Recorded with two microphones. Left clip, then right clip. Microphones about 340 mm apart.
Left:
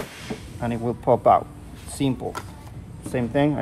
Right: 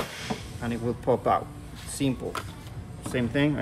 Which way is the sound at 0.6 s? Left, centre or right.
Centre.